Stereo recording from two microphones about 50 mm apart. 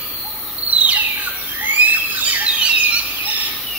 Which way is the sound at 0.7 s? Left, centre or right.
Right.